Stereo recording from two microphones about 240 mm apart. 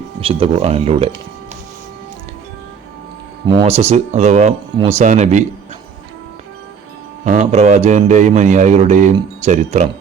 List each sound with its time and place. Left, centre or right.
0.2 s speech: right
3.4 s speech: centre
7.3 s speech: right